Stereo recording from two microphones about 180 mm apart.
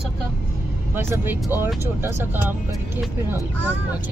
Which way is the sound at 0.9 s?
10° right (ahead or behind).